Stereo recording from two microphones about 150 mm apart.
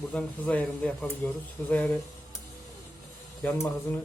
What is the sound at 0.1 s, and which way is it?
Speech, 5° left (ahead or behind).